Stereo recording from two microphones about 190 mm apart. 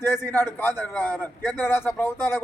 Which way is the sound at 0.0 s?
10° left (ahead or behind).